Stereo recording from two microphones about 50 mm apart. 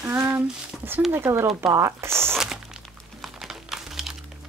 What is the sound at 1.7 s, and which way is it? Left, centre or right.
Speech, right.